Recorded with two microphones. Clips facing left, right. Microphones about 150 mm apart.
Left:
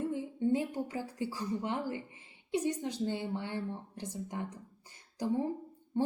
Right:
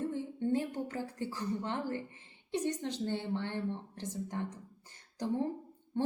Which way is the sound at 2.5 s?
10° left (ahead or behind).